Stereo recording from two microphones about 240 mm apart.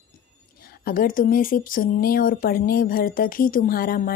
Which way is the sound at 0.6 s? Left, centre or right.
Left.